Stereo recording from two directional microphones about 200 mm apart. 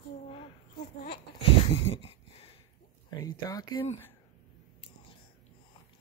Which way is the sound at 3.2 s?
20° left (ahead or behind).